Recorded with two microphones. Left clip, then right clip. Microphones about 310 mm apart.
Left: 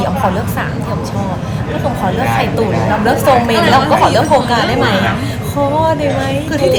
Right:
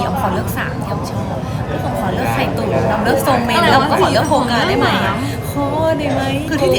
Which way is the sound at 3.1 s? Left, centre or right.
Centre.